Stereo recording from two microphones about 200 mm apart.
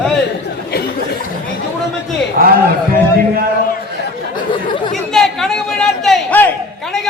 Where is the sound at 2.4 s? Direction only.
45° right (ahead or behind).